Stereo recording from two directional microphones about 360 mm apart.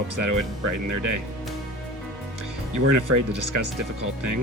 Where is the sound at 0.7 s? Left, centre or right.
Right.